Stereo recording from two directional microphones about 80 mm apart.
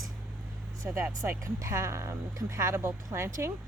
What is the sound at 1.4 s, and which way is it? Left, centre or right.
Speech, right.